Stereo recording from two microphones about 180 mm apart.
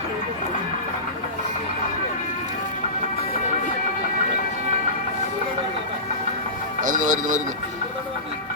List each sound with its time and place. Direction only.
6.8 s speech: 45° right (ahead or behind)